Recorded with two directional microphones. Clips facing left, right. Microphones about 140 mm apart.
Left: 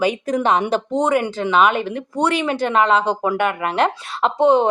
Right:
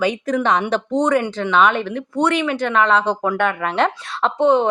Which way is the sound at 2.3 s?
35° left (ahead or behind).